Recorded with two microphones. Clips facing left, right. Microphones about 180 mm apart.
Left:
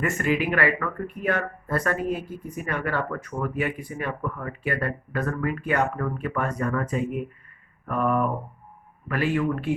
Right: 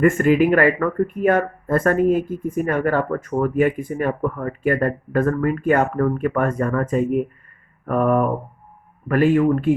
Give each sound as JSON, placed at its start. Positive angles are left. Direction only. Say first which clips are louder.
{"t": 0.0, "sound": "speech", "louder": "right 9 dB", "side_deg": -50}